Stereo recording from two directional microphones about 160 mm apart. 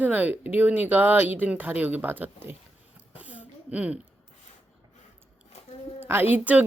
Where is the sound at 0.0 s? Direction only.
10° right (ahead or behind).